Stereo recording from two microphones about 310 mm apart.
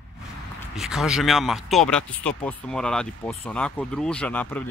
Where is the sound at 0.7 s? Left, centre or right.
Centre.